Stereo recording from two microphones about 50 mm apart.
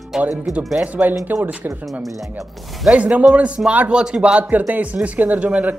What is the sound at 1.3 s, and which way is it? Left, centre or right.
Speech, right.